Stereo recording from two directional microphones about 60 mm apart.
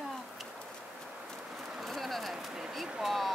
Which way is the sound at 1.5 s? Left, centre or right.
Centre.